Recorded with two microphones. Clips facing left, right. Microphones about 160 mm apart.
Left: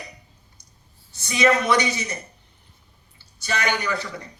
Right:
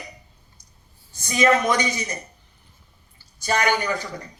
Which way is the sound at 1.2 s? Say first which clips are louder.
Right 1 dB; 45° right (ahead or behind).